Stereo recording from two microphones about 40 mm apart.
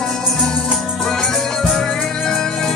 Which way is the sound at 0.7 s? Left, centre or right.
Centre.